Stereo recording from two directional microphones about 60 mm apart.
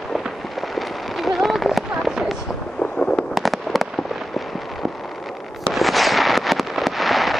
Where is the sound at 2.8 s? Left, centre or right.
Centre.